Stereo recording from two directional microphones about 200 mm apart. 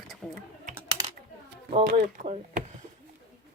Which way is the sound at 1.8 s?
35° right (ahead or behind).